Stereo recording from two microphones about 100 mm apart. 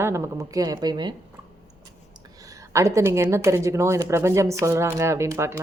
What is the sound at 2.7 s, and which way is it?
A woman's voice, 30° right (ahead or behind).